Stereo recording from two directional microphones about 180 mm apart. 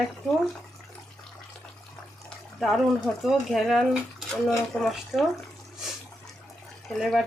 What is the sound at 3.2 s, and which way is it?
Speech, centre (ahead or behind).